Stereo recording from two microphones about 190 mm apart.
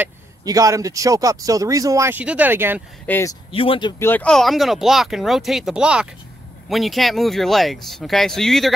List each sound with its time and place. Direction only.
0.5 s speech: 20° right (ahead or behind)
3.1 s speech: 15° left (ahead or behind)
3.5 s speech: 30° left (ahead or behind)
4.0 s speech: 10° left (ahead or behind)